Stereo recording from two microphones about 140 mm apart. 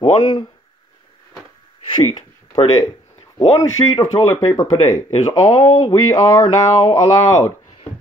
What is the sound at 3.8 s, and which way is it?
Speech, 25° left (ahead or behind).